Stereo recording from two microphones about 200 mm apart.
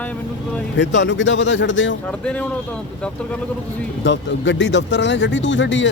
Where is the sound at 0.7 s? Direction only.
65° left (ahead or behind).